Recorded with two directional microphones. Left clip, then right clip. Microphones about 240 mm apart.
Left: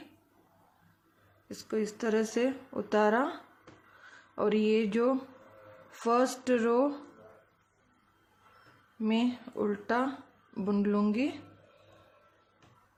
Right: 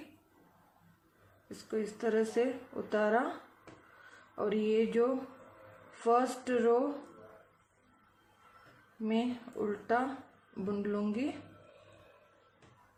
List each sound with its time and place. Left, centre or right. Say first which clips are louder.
1.5 s speech: left 3 dB; left
4.4 s speech: left 3 dB; left
9.0 s speech: left 3 dB; left